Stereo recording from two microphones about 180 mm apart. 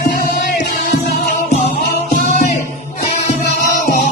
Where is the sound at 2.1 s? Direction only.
45° left (ahead or behind).